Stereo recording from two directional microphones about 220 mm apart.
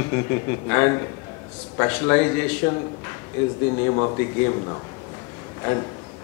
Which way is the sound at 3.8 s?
20° left (ahead or behind).